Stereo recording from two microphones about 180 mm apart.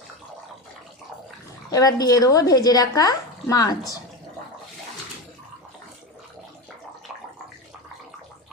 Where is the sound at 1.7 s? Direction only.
20° left (ahead or behind).